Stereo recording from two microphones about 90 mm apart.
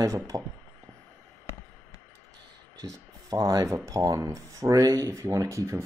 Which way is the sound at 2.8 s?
35° right (ahead or behind).